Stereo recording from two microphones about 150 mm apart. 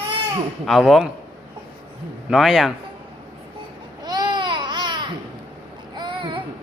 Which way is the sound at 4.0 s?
25° right (ahead or behind).